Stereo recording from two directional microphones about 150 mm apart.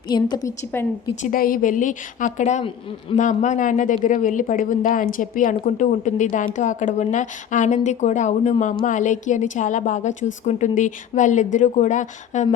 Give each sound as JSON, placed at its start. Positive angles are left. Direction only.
{"t": 0.1, "sound": "a woman's voice", "side_deg": 30}
{"t": 1.2, "sound": "speech", "side_deg": 70}